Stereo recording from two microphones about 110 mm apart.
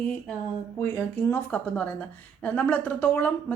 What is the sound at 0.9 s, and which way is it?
A woman's voice, 20° left (ahead or behind).